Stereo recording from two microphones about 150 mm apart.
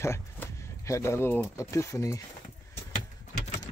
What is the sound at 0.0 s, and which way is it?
Speech, 20° left (ahead or behind).